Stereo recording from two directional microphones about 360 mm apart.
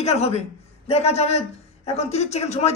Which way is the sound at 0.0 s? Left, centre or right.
Centre.